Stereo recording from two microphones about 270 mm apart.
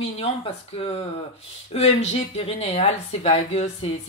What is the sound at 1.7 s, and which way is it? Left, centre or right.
Speech, left.